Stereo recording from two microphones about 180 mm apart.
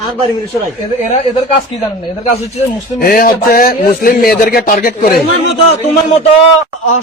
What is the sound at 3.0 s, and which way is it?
Speech, 55° left (ahead or behind).